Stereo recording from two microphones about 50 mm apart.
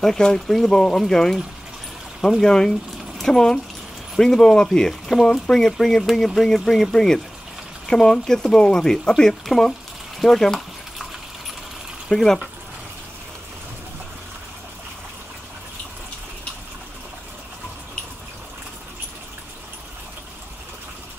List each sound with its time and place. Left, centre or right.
0.0 s speech: centre
2.4 s speech: centre
12.1 s speech: centre